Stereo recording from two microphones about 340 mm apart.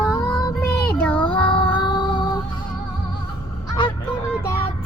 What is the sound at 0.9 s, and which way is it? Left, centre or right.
Child singing, centre.